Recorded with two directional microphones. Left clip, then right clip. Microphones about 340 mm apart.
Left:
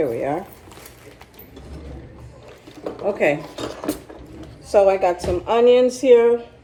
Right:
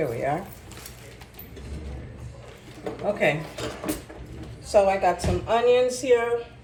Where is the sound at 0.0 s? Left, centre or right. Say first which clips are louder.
Left 4 dB; left.